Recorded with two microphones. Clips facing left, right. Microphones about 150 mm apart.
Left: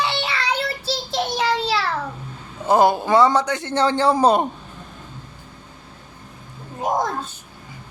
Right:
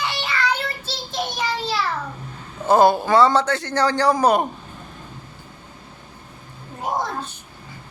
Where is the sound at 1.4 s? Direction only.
90° left.